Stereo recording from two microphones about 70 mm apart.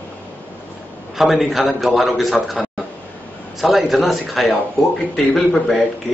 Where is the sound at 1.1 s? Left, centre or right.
Centre.